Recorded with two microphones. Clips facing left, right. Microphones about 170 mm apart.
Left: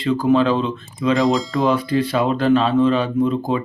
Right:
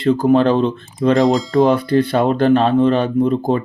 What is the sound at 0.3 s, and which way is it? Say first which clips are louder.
Speech: right 3 dB; 55° right (ahead or behind).